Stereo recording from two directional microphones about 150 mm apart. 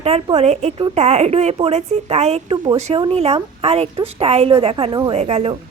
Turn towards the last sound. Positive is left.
turn(degrees=-45)  # may be behind; listen again after turning